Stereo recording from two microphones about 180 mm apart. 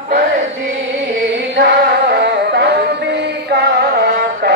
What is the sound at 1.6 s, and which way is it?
Music, 65° right (ahead or behind).